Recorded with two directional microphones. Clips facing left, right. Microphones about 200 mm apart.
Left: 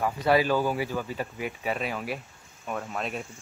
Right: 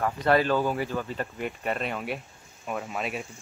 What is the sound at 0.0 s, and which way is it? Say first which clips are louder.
Speech: even; 5° left (ahead or behind).